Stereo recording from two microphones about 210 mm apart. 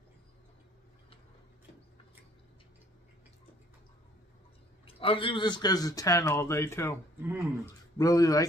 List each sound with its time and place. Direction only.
4.8 s speech: 25° left (ahead or behind)
7.2 s speech: 10° right (ahead or behind)
8.0 s speech: 15° left (ahead or behind)